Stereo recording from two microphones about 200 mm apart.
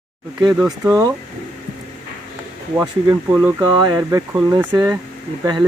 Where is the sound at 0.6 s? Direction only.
5° right (ahead or behind).